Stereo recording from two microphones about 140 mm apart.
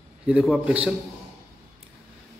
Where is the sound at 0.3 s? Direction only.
5° right (ahead or behind).